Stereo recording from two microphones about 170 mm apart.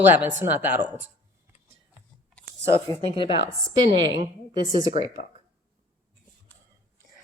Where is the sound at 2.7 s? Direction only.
30° left (ahead or behind).